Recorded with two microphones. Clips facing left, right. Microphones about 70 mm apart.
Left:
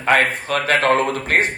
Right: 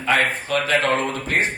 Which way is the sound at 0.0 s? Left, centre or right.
Left.